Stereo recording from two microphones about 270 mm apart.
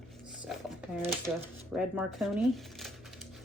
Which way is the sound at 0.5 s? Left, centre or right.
Centre.